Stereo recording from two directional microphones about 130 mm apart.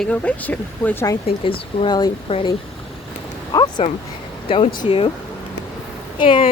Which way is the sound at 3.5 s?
35° left (ahead or behind).